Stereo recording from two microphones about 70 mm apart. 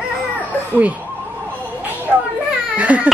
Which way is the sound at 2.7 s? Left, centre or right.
Right.